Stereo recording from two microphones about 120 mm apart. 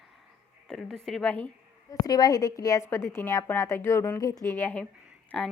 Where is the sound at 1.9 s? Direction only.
35° left (ahead or behind).